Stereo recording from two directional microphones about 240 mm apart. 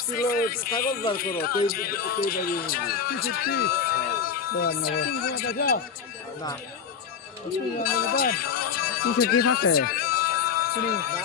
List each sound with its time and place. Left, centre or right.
0.1 s a man's voice: left
7.9 s speech: left
9.7 s music: left